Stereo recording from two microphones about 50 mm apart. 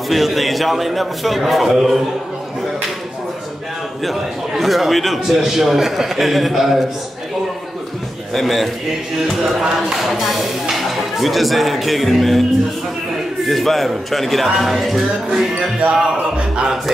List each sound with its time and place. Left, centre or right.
0.1 s speech: centre
4.0 s speech: centre
8.3 s speech: centre
13.5 s speech: centre
15.9 s music: centre